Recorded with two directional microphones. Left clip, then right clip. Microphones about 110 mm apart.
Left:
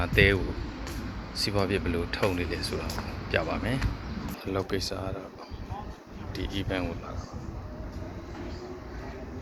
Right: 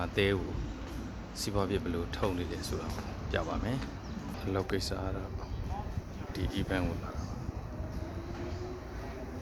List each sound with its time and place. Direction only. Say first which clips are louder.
0.0 s speech: left 7 dB; 10° right (ahead or behind)
1.4 s speech: left 5 dB; 10° right (ahead or behind)
4.4 s speech: left 3 dB; 20° right (ahead or behind)
6.3 s speech: left 3 dB; 20° right (ahead or behind)